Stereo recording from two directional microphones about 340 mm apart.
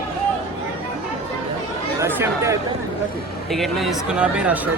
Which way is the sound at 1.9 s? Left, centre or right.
Centre.